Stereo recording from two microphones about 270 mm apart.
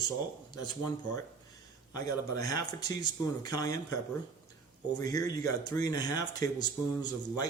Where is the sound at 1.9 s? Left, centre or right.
Centre.